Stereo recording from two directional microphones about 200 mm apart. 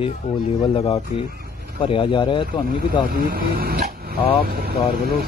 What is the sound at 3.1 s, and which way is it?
Speech, 45° right (ahead or behind).